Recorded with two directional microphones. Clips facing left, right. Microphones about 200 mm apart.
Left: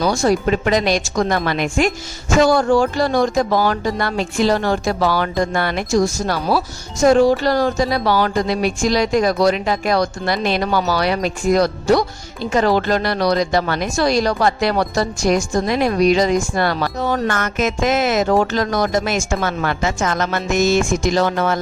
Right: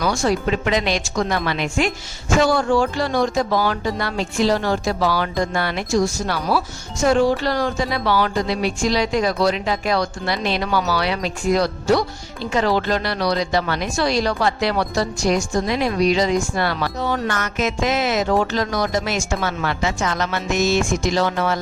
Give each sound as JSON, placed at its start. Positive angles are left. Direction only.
{"t": 0.0, "sound": "a woman's voice", "side_deg": 40}